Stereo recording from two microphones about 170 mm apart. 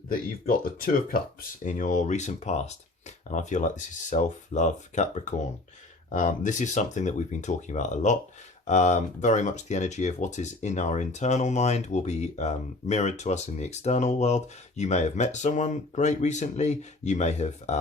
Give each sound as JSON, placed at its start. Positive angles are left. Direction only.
{"t": 0.1, "sound": "speech", "side_deg": 55}